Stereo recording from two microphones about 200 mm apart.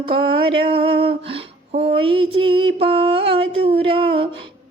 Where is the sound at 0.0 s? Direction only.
25° right (ahead or behind).